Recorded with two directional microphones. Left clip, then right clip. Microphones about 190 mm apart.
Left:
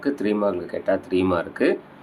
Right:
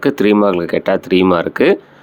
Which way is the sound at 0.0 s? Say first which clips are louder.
Right 10 dB; 45° right (ahead or behind).